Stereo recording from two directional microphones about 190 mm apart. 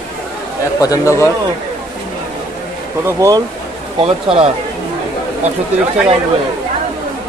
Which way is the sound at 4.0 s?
30° right (ahead or behind).